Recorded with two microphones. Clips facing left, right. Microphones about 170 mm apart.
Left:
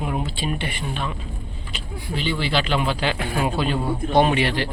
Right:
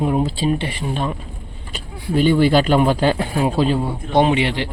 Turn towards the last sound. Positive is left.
turn(degrees=-20)  # may be behind; listen again after turning